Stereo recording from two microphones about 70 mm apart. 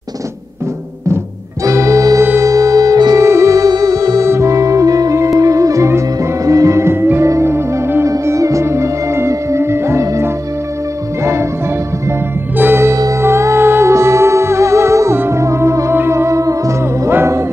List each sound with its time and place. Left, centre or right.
1.6 s organ: right
2.4 s music: right
3.2 s music: right
4.3 s music: right
8.1 s music: right
12.5 s music: right
17.1 s music: right